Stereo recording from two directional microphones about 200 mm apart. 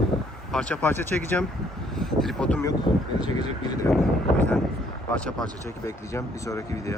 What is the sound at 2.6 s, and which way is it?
Speech, 20° left (ahead or behind).